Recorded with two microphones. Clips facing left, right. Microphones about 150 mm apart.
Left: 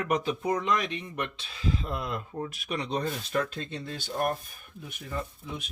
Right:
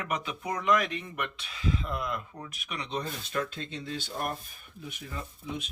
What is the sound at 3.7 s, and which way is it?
Speech, 50° left (ahead or behind).